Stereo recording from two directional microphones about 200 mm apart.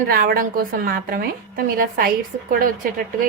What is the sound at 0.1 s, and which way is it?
A woman's voice, 45° right (ahead or behind).